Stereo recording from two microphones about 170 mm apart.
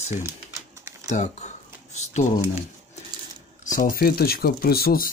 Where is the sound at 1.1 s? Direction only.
40° left (ahead or behind).